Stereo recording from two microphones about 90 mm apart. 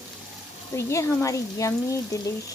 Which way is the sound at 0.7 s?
35° left (ahead or behind).